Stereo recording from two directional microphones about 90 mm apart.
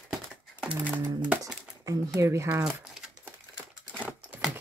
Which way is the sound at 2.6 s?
5° right (ahead or behind).